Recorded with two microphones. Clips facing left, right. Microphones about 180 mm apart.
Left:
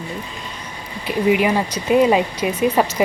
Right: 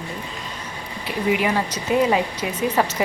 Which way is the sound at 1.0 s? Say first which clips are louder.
Left 5 dB; 20° left (ahead or behind).